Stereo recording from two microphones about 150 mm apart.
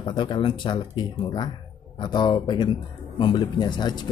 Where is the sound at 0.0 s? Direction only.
35° left (ahead or behind).